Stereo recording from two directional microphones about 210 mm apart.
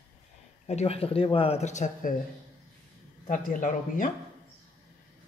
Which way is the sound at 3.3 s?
40° left (ahead or behind).